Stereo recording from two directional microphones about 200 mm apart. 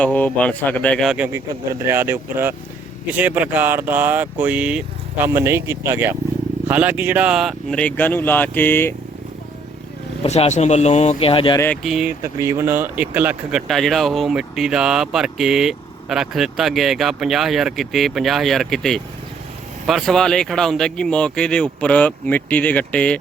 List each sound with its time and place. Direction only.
0.0 s speech: 5° left (ahead or behind)
10.2 s speech: 35° left (ahead or behind)
11.6 s speech: 5° left (ahead or behind)
12.2 s speech: 15° right (ahead or behind); by 23.1 s 5° left (ahead or behind)